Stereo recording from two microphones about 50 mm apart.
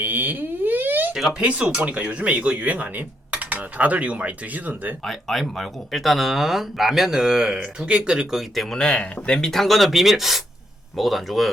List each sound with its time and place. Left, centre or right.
0.0 s a sound: right
1.5 s speech: right
5.0 s speech: centre
8.5 s speech: centre